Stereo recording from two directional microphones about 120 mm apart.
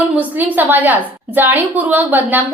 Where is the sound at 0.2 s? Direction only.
15° right (ahead or behind).